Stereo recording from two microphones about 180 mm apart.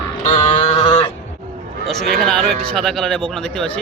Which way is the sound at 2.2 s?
Centre (ahead or behind).